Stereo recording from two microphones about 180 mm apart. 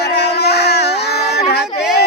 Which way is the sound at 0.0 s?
65° left (ahead or behind).